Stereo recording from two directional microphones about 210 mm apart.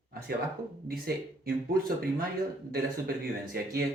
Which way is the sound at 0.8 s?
45° right (ahead or behind).